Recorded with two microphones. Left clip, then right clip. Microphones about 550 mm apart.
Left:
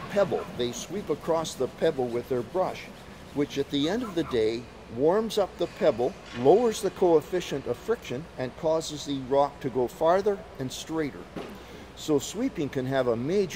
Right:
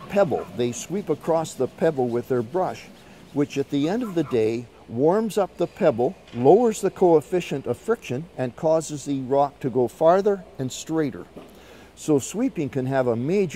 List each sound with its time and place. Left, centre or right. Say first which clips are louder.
0.1 s speech: right 5 dB; right